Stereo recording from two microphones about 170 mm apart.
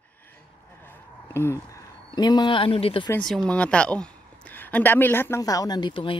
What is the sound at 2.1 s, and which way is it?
Speech, 25° left (ahead or behind).